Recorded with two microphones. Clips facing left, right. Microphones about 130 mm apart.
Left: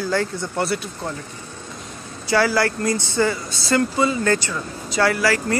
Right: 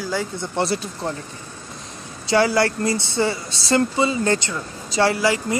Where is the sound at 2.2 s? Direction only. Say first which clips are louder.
Right 1 dB; 25° right (ahead or behind).